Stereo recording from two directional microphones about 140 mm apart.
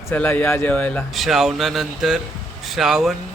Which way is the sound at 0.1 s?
10° left (ahead or behind).